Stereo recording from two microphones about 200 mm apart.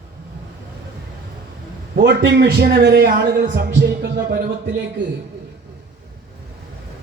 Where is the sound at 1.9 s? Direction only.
55° right (ahead or behind).